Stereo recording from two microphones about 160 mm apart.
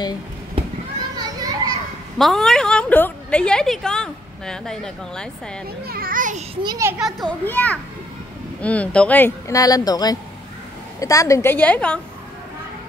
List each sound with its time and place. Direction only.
1.1 s children playing: 25° right (ahead or behind)
2.1 s a woman's voice: centre (ahead or behind)
5.9 s a child's voice: 65° right (ahead or behind)
6.5 s a child's voice: 25° right (ahead or behind)
7.0 s a woman's voice: centre (ahead or behind)
7.4 s a woman's voice: 10° left (ahead or behind)
9.5 s a woman's voice: 20° left (ahead or behind); by 12.0 s 5° left (ahead or behind)